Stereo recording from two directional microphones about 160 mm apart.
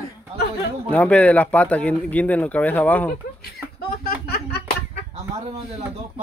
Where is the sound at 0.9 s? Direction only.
10° left (ahead or behind).